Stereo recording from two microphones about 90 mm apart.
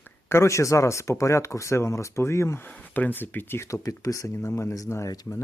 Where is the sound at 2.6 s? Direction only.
20° left (ahead or behind).